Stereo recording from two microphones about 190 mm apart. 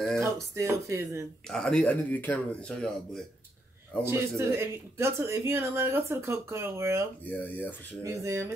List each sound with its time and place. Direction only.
0.2 s speech: 15° right (ahead or behind)
1.5 s speech: 5° left (ahead or behind)
4.0 s speech: 15° right (ahead or behind)
7.2 s speech: 10° left (ahead or behind)
8.0 s speech: 15° right (ahead or behind)